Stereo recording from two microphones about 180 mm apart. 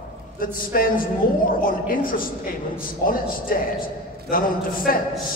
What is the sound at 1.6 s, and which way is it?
Speech, 50° left (ahead or behind).